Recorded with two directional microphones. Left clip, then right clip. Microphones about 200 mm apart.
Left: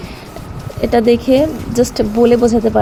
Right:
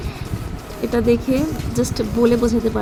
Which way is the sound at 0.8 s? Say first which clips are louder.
Left 6 dB; 20° left (ahead or behind).